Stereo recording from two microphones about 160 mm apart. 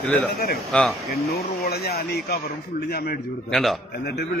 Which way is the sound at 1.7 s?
80° left.